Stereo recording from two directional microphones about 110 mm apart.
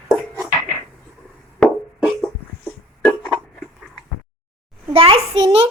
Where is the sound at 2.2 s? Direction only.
5° left (ahead or behind).